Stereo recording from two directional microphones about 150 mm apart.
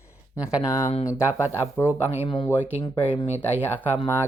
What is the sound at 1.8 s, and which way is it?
Speech, 10° right (ahead or behind).